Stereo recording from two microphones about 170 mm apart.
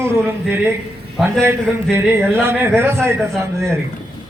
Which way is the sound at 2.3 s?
15° right (ahead or behind).